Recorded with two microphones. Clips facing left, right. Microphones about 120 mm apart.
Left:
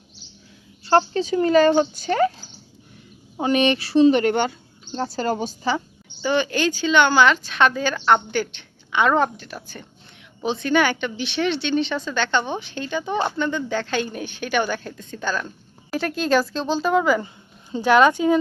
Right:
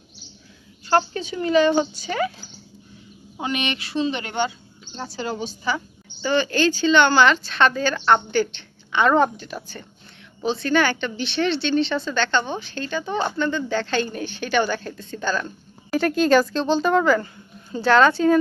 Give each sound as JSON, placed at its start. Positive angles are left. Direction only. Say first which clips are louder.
{"t": 0.9, "sound": "speech", "louder": "left 3 dB", "side_deg": 30}
{"t": 3.4, "sound": "speech", "louder": "left 7 dB", "side_deg": 35}
{"t": 4.1, "sound": "speech", "louder": "left 6 dB", "side_deg": 45}
{"t": 6.2, "sound": "speech", "louder": "right 1 dB", "side_deg": 15}
{"t": 10.4, "sound": "a woman's voice", "louder": "even", "side_deg": 15}